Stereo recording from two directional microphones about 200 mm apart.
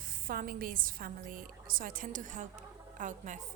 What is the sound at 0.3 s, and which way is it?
A woman's voice, 45° right (ahead or behind).